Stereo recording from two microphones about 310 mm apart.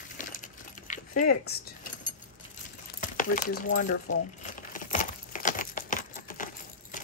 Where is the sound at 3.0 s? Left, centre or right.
Left.